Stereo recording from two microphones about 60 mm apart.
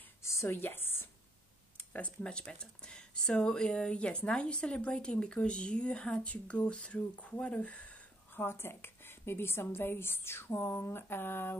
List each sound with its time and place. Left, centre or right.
0.2 s a woman's voice: left
0.6 s a woman's voice: left
1.8 s speech: left
8.4 s a woman's voice: left